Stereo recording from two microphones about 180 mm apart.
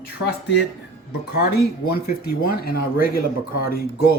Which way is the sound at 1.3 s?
65° left (ahead or behind).